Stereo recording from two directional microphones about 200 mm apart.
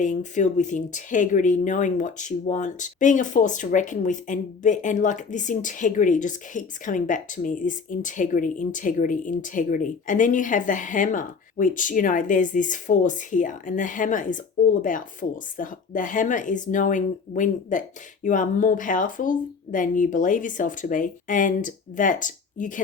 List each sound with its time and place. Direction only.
0.0 s speech: 40° left (ahead or behind)